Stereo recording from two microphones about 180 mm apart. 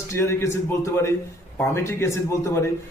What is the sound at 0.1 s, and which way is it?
A man's voice, 15° left (ahead or behind).